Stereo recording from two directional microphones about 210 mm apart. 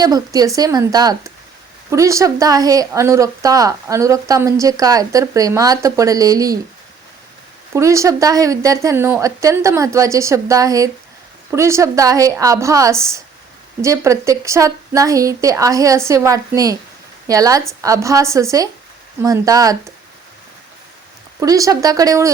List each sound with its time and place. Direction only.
0.0 s speech: 20° right (ahead or behind)
7.7 s speech: 15° right (ahead or behind)
21.4 s speech: 15° right (ahead or behind)